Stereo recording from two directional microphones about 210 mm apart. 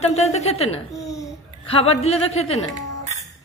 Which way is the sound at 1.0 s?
15° left (ahead or behind).